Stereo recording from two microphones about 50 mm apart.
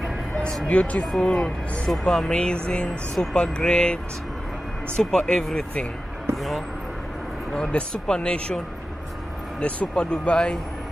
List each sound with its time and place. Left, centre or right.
0.7 s speech: left; by 6.6 s centre
7.9 s speech: centre
9.6 s speech: left